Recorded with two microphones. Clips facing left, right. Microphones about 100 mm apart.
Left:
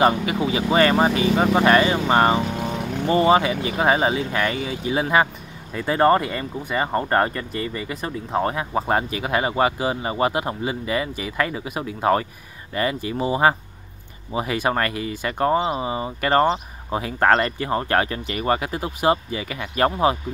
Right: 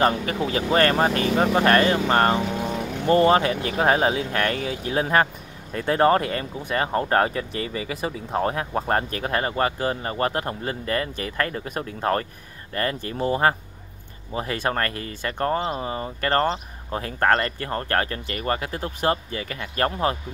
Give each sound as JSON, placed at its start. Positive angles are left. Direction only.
{"t": 0.0, "sound": "speech", "side_deg": 10}